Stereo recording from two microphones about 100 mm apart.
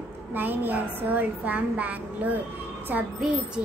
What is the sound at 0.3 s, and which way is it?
Child singing, 20° right (ahead or behind).